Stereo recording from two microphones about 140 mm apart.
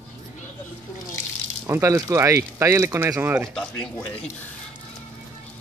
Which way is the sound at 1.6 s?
20° right (ahead or behind).